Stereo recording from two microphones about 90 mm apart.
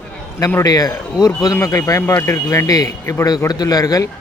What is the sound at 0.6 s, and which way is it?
Speech, 45° left (ahead or behind).